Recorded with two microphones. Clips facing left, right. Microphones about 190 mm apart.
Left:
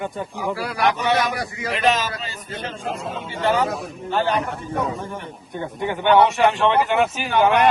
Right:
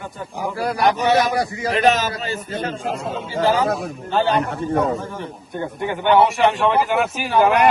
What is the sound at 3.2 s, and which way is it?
A man's voice, 35° right (ahead or behind).